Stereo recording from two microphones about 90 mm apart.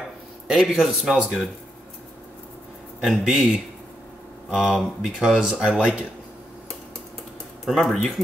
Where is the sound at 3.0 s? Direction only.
5° right (ahead or behind).